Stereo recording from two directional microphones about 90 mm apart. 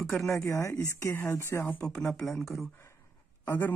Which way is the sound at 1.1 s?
25° left (ahead or behind).